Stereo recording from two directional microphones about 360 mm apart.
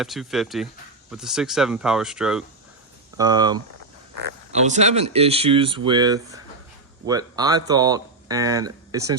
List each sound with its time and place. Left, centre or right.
0.0 s speech: centre